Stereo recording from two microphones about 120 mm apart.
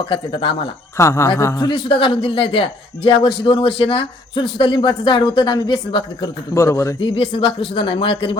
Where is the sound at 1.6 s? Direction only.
40° left (ahead or behind).